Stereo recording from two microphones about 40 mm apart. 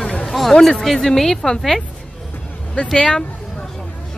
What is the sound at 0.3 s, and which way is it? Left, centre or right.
Speech, centre.